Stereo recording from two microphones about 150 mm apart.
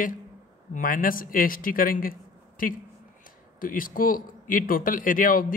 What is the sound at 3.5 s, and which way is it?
A man's voice, 65° left (ahead or behind).